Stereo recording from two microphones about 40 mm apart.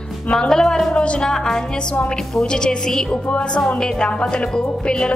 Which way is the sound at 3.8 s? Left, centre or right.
Centre.